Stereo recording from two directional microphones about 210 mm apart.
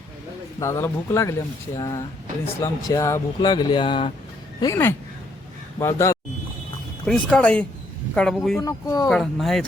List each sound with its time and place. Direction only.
0.6 s speech: 15° left (ahead or behind)
4.6 s speech: 15° left (ahead or behind)
7.0 s speech: 5° left (ahead or behind)
8.6 s speech: 15° left (ahead or behind)
9.0 s speech: centre (ahead or behind)